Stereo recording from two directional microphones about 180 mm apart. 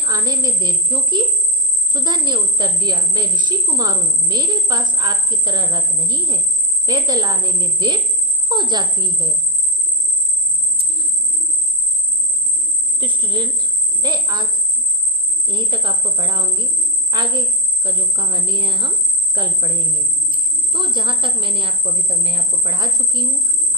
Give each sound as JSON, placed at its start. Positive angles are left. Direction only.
{"t": 0.0, "sound": "a woman's voice", "side_deg": -25}
{"t": 10.8, "sound": "cricket", "side_deg": -30}
{"t": 13.0, "sound": "a woman's voice", "side_deg": -25}
{"t": 15.4, "sound": "a woman's voice", "side_deg": -25}